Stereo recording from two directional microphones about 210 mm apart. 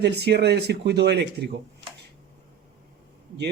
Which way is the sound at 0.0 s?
50° right (ahead or behind).